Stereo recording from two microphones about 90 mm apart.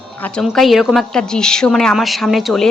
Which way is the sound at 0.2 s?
10° left (ahead or behind).